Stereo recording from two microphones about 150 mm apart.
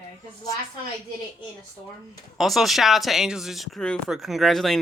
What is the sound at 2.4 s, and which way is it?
Speech, centre (ahead or behind).